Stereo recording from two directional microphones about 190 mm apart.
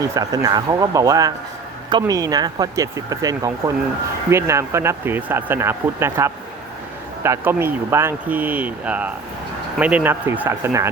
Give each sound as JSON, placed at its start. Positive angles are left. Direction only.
{"t": 0.0, "sound": "speech", "side_deg": -20}